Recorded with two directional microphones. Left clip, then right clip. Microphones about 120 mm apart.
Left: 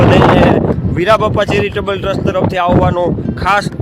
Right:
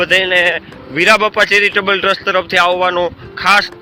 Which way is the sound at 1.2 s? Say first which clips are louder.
Right 2 dB; 65° left (ahead or behind).